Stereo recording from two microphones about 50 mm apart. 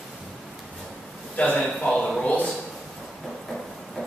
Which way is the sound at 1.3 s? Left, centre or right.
Left.